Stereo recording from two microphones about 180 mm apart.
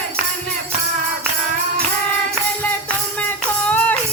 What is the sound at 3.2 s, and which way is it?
Music, 10° left (ahead or behind).